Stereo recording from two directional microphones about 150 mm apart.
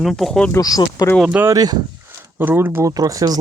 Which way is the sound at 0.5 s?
25° left (ahead or behind).